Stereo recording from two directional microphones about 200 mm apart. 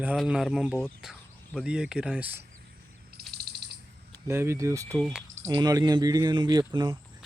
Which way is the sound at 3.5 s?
55° right (ahead or behind).